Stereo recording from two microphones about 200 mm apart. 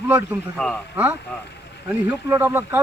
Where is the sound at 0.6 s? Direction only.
5° left (ahead or behind).